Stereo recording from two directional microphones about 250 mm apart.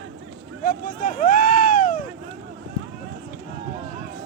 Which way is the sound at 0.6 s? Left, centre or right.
Left.